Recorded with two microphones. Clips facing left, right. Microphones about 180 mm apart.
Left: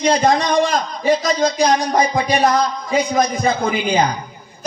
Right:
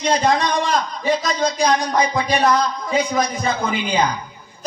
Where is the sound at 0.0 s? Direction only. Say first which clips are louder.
Left 3 dB; 45° left (ahead or behind).